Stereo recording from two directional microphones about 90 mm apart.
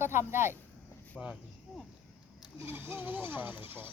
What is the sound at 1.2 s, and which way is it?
Speech, 5° left (ahead or behind).